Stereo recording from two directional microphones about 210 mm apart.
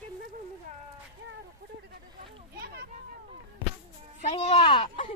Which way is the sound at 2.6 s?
45° right (ahead or behind).